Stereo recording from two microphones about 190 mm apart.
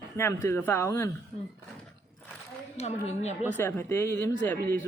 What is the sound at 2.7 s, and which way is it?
Speech, 35° left (ahead or behind).